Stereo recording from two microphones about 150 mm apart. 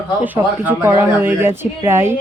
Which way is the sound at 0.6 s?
15° right (ahead or behind).